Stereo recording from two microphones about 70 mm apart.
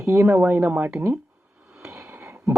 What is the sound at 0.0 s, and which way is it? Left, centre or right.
Speech, right.